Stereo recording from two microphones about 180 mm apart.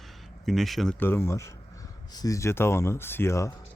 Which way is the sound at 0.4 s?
Centre (ahead or behind).